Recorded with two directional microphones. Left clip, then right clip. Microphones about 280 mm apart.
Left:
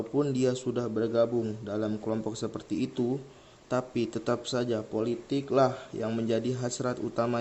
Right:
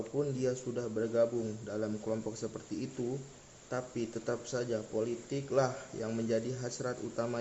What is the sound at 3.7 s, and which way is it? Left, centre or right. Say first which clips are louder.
A man's voice: left 7 dB; left.